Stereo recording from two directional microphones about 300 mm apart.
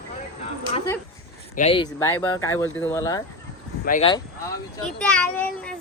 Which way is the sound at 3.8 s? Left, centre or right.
Left.